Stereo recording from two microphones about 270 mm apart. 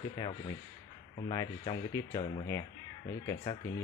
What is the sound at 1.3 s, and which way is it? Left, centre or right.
Speech, centre.